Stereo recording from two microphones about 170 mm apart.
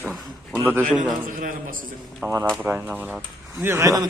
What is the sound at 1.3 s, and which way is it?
Speech, 55° right (ahead or behind).